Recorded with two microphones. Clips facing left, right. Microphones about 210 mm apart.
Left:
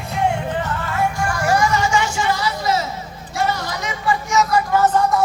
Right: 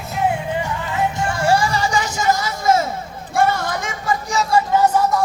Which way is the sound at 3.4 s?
50° right (ahead or behind).